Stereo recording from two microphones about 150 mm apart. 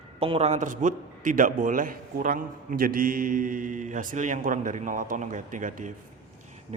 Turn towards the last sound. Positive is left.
turn(degrees=-60)  # may be behind; listen again after turning